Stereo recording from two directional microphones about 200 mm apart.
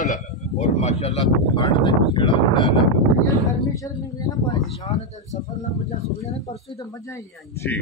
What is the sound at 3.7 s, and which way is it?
Speech, 15° left (ahead or behind).